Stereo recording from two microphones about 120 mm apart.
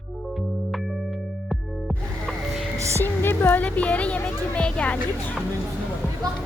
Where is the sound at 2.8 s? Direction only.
25° right (ahead or behind).